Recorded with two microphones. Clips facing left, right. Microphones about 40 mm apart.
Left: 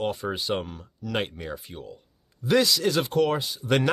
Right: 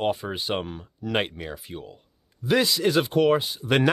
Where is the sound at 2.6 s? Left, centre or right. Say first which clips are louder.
Right 2 dB; right.